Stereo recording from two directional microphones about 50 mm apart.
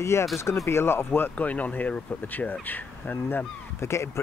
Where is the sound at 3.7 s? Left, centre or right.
Left.